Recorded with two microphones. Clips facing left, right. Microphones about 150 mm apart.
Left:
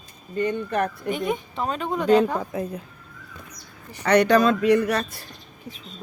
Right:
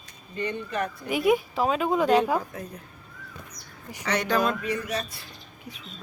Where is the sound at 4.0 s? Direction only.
60° left (ahead or behind).